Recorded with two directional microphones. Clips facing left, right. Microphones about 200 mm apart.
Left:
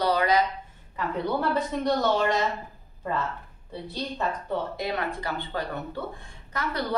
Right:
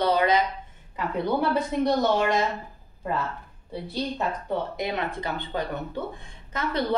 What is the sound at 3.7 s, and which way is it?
A woman's voice, 10° right (ahead or behind).